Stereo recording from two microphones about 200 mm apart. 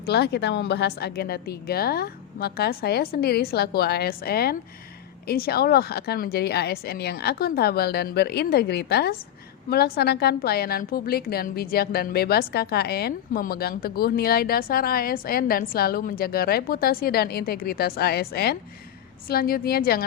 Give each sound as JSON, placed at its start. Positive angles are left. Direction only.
{"t": 0.0, "sound": "a woman's voice", "side_deg": 55}